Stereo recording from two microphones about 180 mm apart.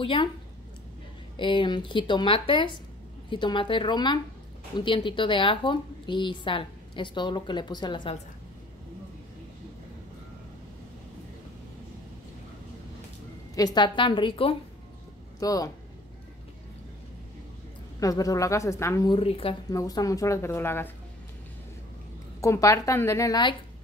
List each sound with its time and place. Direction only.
0.0 s a woman's voice: 30° left (ahead or behind)
1.3 s a woman's voice: 25° left (ahead or behind)
13.6 s a woman's voice: 25° left (ahead or behind)
18.0 s a woman's voice: 20° left (ahead or behind)
19.1 s speech: 30° left (ahead or behind)
19.7 s a woman's voice: 20° left (ahead or behind)
22.4 s a woman's voice: 15° left (ahead or behind)